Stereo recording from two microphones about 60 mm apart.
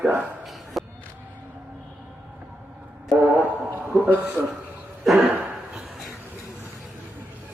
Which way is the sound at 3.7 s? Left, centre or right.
Right.